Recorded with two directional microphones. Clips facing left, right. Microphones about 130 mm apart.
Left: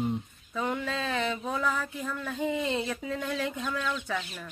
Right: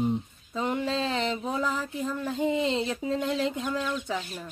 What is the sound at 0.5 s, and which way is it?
Speech, 20° right (ahead or behind).